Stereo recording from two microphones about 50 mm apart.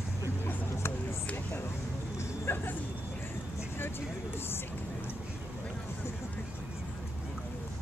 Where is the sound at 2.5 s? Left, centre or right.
Left.